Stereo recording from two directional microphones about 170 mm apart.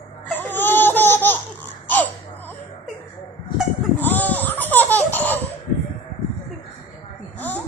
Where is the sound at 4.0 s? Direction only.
10° left (ahead or behind).